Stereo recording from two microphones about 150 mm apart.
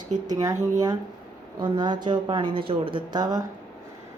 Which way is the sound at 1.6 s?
30° right (ahead or behind).